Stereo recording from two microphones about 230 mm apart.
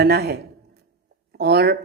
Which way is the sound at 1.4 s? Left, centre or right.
Right.